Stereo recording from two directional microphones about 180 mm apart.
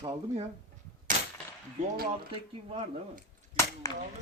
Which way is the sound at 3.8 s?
15° left (ahead or behind).